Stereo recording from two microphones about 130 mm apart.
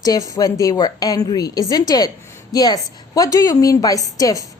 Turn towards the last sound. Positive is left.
turn(degrees=25)  # may be behind; listen again after turning